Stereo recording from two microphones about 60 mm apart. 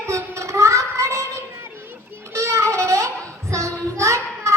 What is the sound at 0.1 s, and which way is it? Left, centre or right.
Child singing, right.